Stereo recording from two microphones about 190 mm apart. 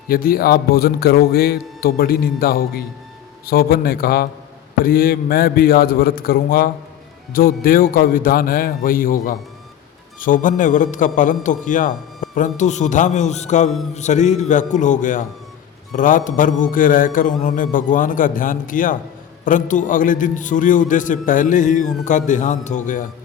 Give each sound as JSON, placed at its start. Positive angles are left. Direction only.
{"t": 0.1, "sound": "a man's voice", "side_deg": 50}